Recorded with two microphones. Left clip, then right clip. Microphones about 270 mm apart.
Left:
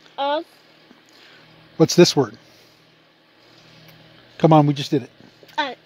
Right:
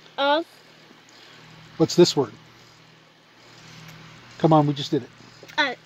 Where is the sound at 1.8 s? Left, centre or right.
Left.